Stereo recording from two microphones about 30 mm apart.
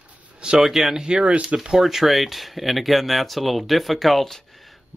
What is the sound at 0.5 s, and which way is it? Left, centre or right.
Speech, centre.